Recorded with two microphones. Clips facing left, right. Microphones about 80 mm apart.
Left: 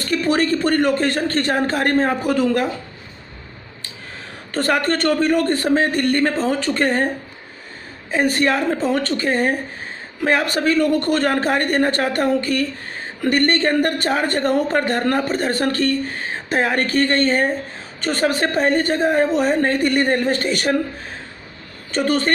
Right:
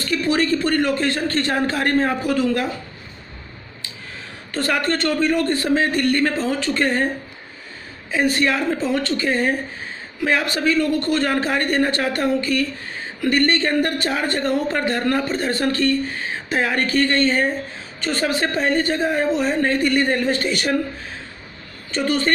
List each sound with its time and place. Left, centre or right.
0.0 s a man's voice: left
4.5 s a man's voice: left
8.1 s a man's voice: left
21.9 s speech: left